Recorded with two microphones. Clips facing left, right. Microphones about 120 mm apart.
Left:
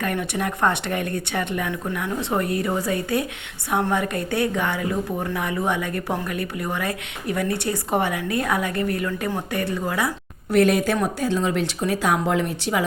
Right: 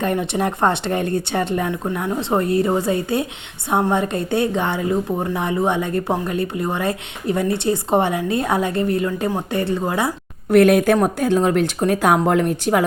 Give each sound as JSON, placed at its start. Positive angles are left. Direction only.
{"t": 0.0, "sound": "a woman's voice", "side_deg": -25}
{"t": 10.5, "sound": "speech", "side_deg": -55}